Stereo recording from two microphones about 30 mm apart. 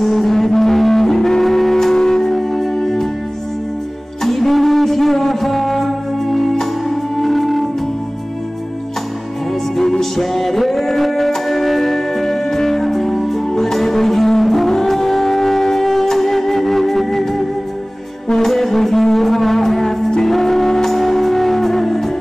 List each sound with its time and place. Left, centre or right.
0.0 s music: centre
2.3 s music: centre
4.2 s music: centre
9.8 s music: centre
18.5 s brass instrument: centre
19.1 s music: centre